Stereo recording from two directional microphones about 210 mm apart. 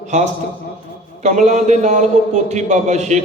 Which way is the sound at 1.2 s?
35° right (ahead or behind).